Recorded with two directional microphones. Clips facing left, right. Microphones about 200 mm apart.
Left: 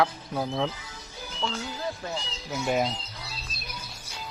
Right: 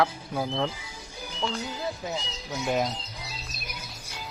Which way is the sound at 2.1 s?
15° right (ahead or behind).